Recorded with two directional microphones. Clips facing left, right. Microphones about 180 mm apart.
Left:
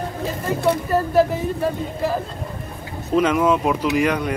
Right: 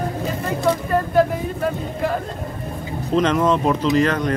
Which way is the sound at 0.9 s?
5° left (ahead or behind).